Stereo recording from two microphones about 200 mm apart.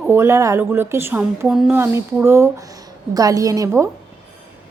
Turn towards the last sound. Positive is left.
turn(degrees=-15)  # may be behind; listen again after turning